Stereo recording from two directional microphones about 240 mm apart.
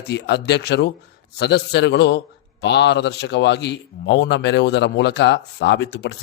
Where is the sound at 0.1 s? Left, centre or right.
Left.